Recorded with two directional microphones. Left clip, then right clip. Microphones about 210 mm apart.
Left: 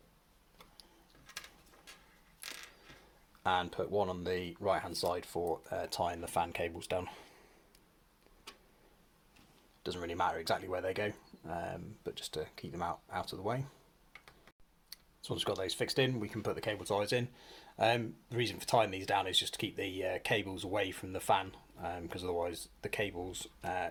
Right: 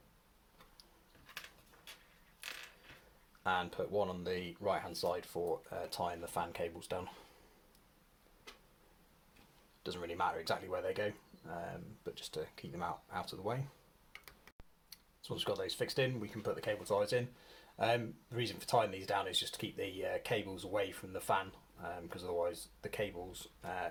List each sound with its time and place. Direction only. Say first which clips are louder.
3.4 s speech: left 3 dB; 30° left (ahead or behind)
9.8 s speech: left 3 dB; 30° left (ahead or behind)
14.1 s tick-tock: right 1 dB; 25° right (ahead or behind)
14.8 s speech: left 4 dB; 35° left (ahead or behind)